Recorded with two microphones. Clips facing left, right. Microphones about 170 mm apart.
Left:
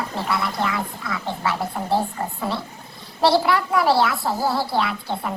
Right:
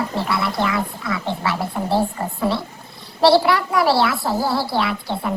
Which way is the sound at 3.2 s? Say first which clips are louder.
Right 3 dB; 85° right.